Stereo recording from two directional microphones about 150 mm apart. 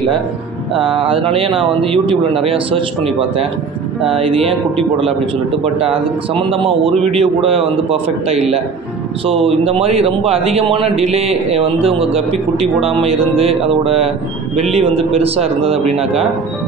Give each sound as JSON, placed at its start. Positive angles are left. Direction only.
{"t": 0.7, "sound": "a man's voice", "side_deg": -35}
{"t": 4.1, "sound": "a man's voice", "side_deg": -40}
{"t": 5.6, "sound": "a man's voice", "side_deg": -40}